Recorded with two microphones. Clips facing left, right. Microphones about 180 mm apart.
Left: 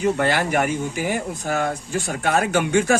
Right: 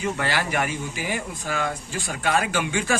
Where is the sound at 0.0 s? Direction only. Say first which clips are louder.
Left 6 dB; 50° left (ahead or behind).